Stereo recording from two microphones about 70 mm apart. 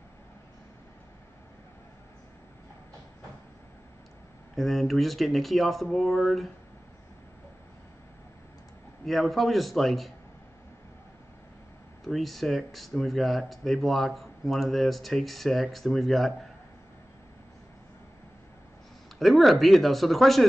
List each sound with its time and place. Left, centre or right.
4.6 s speech: centre
9.0 s speech: centre
12.1 s speech: centre
19.1 s speech: centre